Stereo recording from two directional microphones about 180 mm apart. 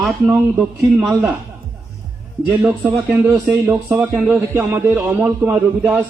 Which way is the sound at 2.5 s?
10° right (ahead or behind).